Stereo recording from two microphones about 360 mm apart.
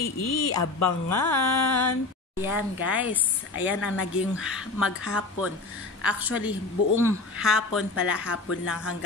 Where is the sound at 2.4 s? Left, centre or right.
Centre.